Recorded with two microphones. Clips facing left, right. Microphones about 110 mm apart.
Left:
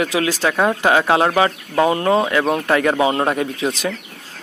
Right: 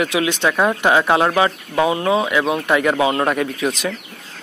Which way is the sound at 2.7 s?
35° left (ahead or behind).